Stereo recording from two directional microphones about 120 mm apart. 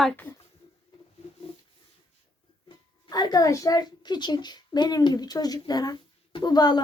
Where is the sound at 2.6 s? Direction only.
35° left (ahead or behind).